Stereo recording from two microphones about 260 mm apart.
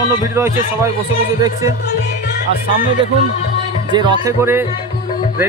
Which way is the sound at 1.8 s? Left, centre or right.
Left.